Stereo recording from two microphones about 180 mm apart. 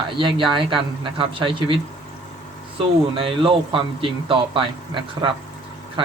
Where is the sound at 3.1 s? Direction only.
30° right (ahead or behind).